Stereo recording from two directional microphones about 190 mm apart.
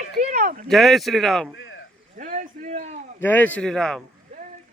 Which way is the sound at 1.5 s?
85° left.